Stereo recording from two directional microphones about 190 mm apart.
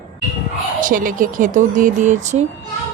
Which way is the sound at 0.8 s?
45° right (ahead or behind).